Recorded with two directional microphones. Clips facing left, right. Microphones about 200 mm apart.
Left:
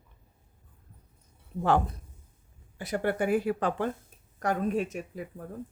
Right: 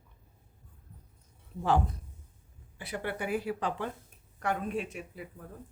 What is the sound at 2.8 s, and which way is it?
Speech, 45° left (ahead or behind).